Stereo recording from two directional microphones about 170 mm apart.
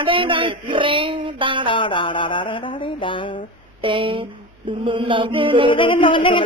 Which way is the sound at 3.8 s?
30° right (ahead or behind).